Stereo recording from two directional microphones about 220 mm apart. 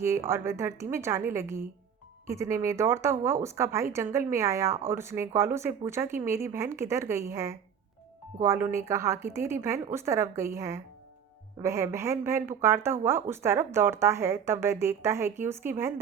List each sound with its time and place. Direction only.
0.0 s speech: 10° right (ahead or behind)